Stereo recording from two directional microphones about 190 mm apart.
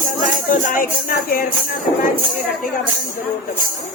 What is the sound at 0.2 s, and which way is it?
Music, 45° left (ahead or behind).